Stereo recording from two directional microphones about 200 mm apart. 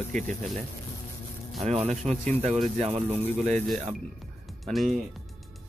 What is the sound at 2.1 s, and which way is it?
Speech, 10° left (ahead or behind).